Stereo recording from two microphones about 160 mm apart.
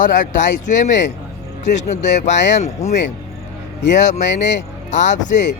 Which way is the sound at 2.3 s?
90° left.